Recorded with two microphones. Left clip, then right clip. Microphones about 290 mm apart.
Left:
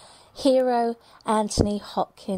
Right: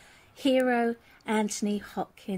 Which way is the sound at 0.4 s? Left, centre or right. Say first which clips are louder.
Left 5 dB; left.